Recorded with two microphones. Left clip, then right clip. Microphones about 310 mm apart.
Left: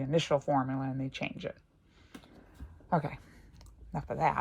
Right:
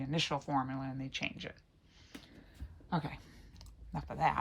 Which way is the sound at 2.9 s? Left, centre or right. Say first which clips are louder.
Left 7 dB; centre.